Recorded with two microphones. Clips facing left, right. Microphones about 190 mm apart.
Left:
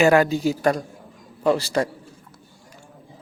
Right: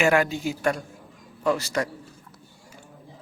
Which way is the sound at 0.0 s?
35° left (ahead or behind).